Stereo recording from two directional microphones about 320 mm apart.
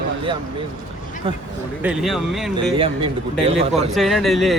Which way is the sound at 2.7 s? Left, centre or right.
Centre.